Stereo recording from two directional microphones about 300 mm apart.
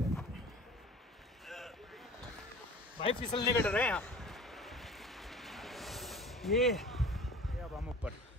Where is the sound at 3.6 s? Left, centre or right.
Centre.